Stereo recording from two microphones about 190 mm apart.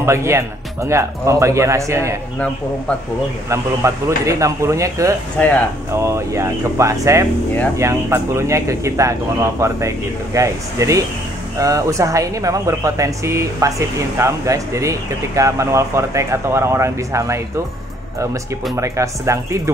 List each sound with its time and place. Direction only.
0.0 s speech: 15° right (ahead or behind)
3.4 s speech: 15° right (ahead or behind)
18.8 s speech: 15° right (ahead or behind)